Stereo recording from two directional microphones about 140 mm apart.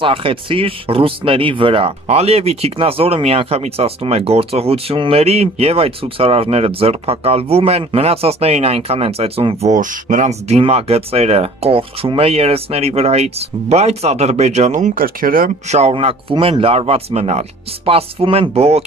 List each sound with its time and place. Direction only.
0.0 s speech: 40° right (ahead or behind)
9.7 s speech: 65° right (ahead or behind)
10.6 s speech: 45° right (ahead or behind); by 15.5 s 90° right
15.7 s speech: 50° right (ahead or behind)